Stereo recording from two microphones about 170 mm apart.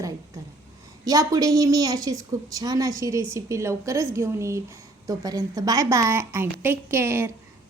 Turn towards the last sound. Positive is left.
turn(degrees=-15)  # may be behind; listen again after turning